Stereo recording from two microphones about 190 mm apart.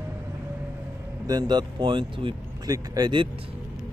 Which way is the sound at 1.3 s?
20° right (ahead or behind).